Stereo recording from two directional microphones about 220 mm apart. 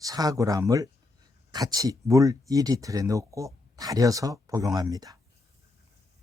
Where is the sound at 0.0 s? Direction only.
15° right (ahead or behind).